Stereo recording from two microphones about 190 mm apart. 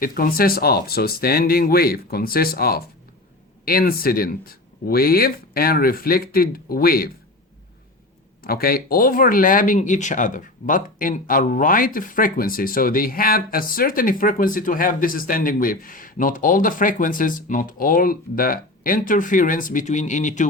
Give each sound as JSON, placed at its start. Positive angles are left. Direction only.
{"t": 0.0, "sound": "speech", "side_deg": 50}
{"t": 8.4, "sound": "speech", "side_deg": 50}